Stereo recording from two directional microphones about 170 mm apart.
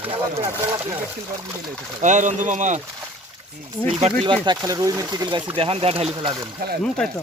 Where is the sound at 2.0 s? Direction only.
45° right (ahead or behind).